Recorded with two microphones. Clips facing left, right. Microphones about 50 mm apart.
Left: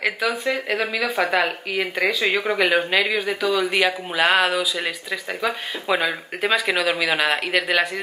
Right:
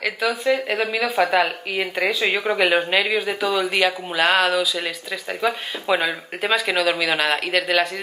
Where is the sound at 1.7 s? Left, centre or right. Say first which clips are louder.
Even; centre.